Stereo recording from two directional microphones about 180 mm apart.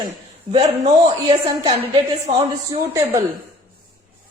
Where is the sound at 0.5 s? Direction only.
25° right (ahead or behind).